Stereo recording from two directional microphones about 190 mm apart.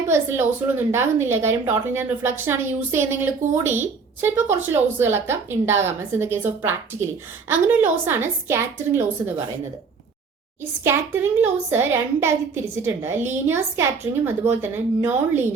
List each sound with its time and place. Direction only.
0.1 s speech: 10° right (ahead or behind)
10.8 s speech: 10° right (ahead or behind)